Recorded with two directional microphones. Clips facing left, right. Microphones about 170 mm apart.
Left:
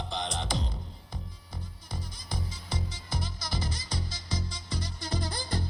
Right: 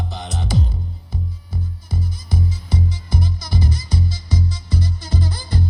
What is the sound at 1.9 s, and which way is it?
Music, 10° right (ahead or behind).